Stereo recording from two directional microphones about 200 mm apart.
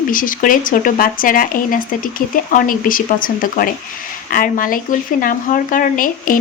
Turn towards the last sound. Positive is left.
turn(degrees=45)  # may be behind; listen again after turning